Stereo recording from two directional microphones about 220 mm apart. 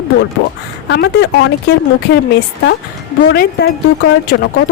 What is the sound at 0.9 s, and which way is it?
Speech, 50° left (ahead or behind).